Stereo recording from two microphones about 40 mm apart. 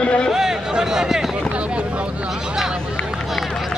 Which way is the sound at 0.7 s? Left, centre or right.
Centre.